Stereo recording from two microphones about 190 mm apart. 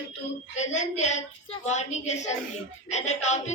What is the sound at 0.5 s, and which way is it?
A woman's voice, 40° left (ahead or behind).